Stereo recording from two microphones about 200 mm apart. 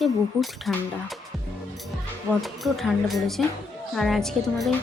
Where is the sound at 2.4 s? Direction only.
Centre (ahead or behind).